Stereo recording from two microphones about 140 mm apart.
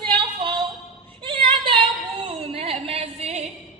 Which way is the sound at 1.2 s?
35° right (ahead or behind).